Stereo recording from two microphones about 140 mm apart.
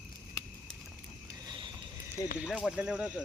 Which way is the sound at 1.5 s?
35° right (ahead or behind).